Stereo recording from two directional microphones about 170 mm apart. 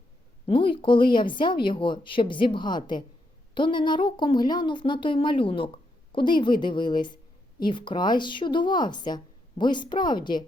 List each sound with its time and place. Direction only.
0.4 s speech: 30° left (ahead or behind)